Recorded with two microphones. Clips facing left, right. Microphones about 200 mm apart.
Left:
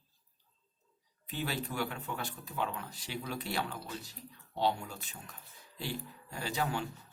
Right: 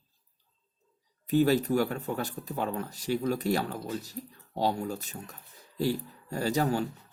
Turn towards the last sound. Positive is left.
turn(degrees=-40)  # may be behind; listen again after turning